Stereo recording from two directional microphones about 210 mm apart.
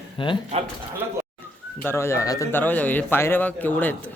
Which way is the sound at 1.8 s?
10° left (ahead or behind).